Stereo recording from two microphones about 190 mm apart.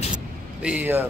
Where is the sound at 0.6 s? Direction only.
5° right (ahead or behind).